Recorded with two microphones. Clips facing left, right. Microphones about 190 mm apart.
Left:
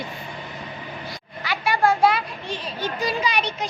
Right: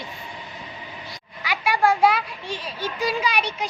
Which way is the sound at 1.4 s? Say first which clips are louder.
Even; 10° right (ahead or behind).